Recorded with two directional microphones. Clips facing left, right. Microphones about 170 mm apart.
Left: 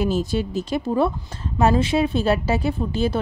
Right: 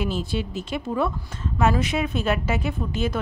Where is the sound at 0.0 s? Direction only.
40° left (ahead or behind).